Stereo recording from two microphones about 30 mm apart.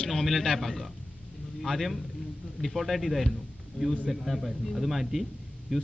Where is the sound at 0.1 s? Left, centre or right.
Centre.